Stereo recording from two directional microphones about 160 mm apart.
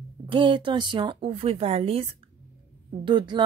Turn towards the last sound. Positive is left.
turn(degrees=-25)  # may be behind; listen again after turning